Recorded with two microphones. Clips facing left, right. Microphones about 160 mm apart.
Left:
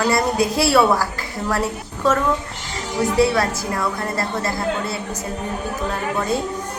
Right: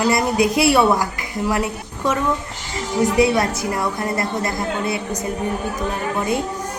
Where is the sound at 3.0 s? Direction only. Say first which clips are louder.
Right 1 dB; 20° right (ahead or behind).